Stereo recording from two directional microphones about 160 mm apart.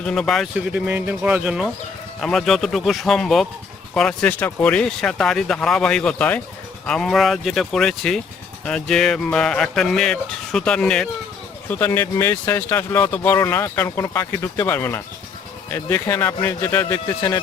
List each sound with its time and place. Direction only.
0.0 s speech: 5° left (ahead or behind)